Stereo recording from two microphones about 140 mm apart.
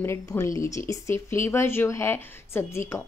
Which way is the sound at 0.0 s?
20° left (ahead or behind).